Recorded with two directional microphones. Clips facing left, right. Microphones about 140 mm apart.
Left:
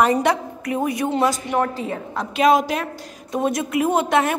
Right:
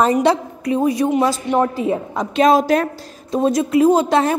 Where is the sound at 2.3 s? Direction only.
35° right (ahead or behind).